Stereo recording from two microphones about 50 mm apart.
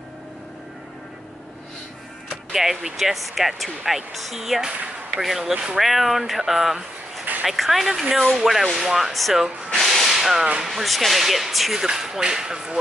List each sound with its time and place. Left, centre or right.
2.5 s speech: centre
9.8 s hiss: centre
10.6 s speech: centre